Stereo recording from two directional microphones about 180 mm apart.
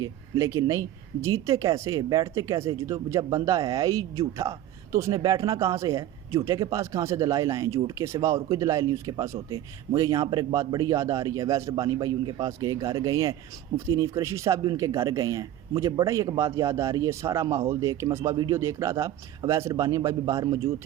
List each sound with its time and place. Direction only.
0.0 s speech: 15° right (ahead or behind)